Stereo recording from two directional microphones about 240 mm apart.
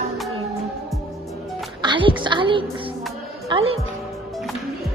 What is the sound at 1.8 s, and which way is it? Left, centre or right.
A woman's voice, centre.